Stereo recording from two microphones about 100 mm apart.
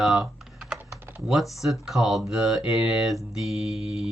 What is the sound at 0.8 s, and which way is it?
Typing, 25° right (ahead or behind).